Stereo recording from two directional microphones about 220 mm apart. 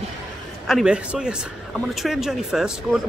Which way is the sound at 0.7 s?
Centre (ahead or behind).